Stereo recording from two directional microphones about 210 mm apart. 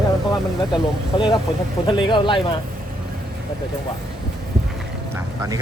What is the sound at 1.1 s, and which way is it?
Speech, 25° left (ahead or behind).